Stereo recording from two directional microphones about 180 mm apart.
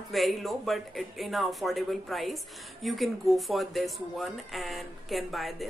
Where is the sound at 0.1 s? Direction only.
Centre (ahead or behind).